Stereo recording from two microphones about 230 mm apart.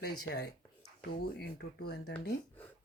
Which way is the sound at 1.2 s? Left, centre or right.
Left.